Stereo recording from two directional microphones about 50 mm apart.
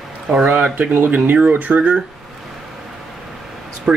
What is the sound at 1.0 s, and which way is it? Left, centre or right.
Speech, right.